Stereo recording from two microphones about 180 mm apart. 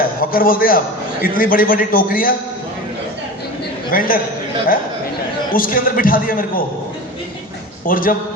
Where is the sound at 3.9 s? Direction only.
50° left (ahead or behind).